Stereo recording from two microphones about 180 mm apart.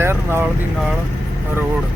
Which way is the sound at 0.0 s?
15° right (ahead or behind).